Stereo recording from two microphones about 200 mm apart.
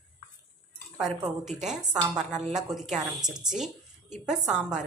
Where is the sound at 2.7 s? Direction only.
Centre (ahead or behind).